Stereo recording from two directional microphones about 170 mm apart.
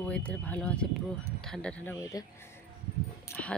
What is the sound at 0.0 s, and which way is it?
Speech, 10° left (ahead or behind).